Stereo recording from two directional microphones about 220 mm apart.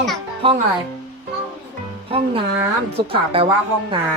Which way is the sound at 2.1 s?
25° right (ahead or behind).